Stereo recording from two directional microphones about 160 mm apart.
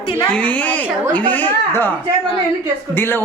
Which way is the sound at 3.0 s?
15° left (ahead or behind).